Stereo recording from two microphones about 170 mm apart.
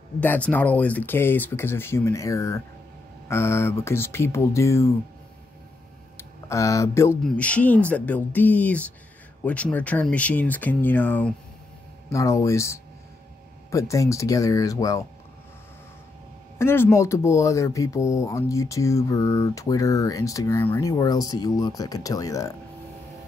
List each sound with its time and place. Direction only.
0.2 s speech: 10° left (ahead or behind)
6.1 s speech: 20° left (ahead or behind)
16.5 s speech: 15° left (ahead or behind)